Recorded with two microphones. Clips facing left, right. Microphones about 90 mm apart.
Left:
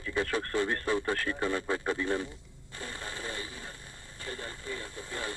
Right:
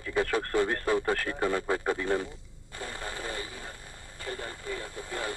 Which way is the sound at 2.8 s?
45° right (ahead or behind).